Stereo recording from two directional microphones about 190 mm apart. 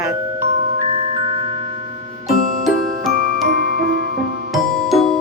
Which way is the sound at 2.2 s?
Centre (ahead or behind).